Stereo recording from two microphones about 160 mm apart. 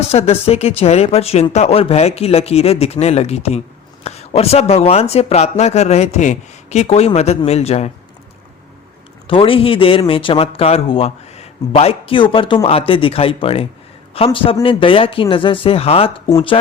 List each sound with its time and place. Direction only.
0.1 s speech: 40° left (ahead or behind)
9.2 s speech: 35° left (ahead or behind)